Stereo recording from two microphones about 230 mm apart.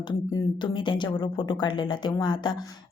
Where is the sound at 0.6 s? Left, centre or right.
Left.